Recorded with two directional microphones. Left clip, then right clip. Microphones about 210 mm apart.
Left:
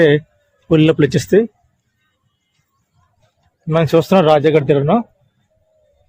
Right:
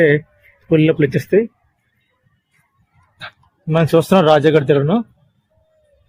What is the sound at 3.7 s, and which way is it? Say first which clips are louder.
A man's voice: left 1 dB; 5° left (ahead or behind).